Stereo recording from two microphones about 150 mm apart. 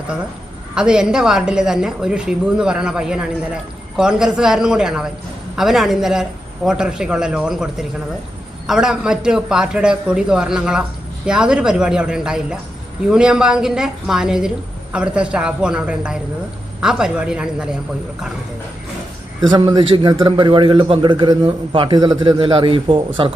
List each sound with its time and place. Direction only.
0.8 s a woman's voice: 5° right (ahead or behind)
19.5 s a man's voice: 30° right (ahead or behind)